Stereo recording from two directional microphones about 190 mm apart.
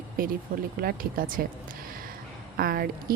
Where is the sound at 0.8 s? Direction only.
50° right (ahead or behind).